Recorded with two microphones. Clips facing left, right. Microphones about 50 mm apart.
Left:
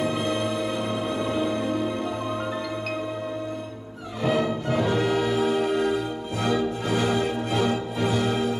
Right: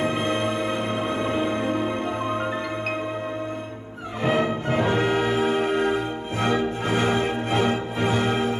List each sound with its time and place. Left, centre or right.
0.0 s music: right
4.2 s music: right